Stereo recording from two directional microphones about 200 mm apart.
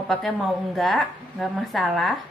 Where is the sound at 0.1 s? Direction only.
Centre (ahead or behind).